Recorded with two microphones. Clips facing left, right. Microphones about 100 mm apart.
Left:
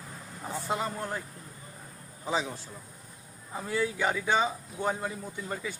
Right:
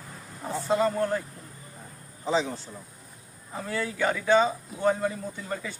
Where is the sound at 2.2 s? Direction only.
10° left (ahead or behind).